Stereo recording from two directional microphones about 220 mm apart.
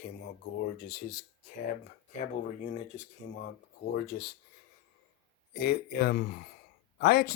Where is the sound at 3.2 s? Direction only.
50° left (ahead or behind).